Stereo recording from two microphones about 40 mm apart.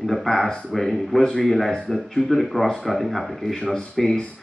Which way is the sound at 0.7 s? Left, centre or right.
Centre.